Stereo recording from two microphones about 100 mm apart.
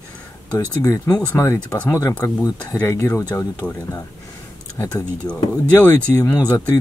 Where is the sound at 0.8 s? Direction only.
35° left (ahead or behind).